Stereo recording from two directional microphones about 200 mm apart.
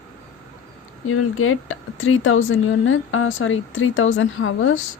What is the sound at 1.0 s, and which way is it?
Speech, 90° left.